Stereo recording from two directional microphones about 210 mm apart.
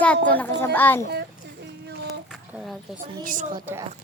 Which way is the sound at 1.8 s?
50° right (ahead or behind).